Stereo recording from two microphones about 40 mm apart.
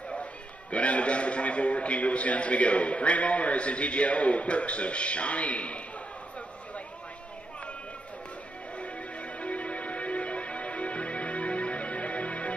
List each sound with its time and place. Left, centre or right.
0.2 s a man's voice: left
8.7 s music: left